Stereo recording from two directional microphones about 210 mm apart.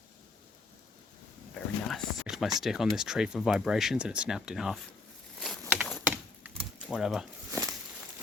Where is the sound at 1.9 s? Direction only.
Centre (ahead or behind).